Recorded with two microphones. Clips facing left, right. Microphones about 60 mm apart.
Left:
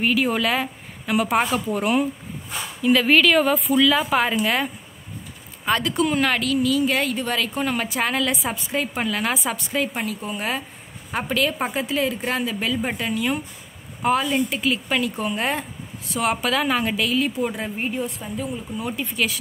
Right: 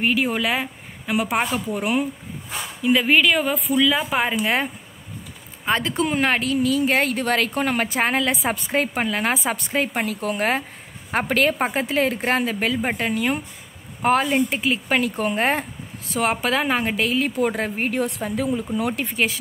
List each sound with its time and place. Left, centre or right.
0.0 s a woman's voice: centre
4.4 s speech: right
5.7 s a woman's voice: right
17.5 s speech: right
19.1 s a woman's voice: right